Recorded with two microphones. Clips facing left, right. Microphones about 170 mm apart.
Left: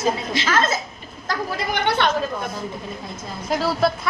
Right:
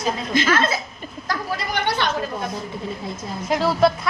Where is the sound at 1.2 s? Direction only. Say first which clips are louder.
Left 1 dB; 50° left (ahead or behind).